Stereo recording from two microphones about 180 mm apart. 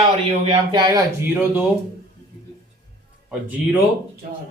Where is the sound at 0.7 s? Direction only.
20° right (ahead or behind).